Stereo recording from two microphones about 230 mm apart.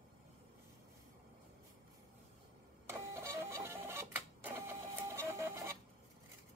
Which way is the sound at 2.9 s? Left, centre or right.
Centre.